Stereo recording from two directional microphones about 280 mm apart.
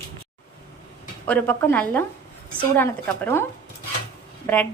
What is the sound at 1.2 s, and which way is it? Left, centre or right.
Speech, centre.